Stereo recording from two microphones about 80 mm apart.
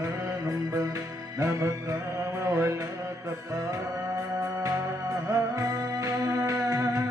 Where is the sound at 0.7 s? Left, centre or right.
Right.